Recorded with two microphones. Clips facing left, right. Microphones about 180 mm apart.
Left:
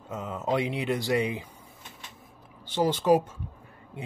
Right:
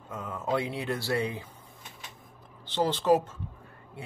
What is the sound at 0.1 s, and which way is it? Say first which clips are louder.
Speech: left 2 dB; 20° left (ahead or behind).